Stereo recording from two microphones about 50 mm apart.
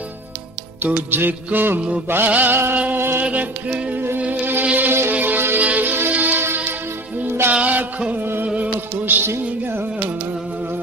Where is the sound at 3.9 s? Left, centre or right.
Right.